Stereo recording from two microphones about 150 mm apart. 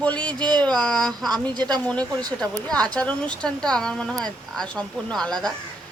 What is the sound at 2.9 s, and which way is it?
Speech, 10° left (ahead or behind).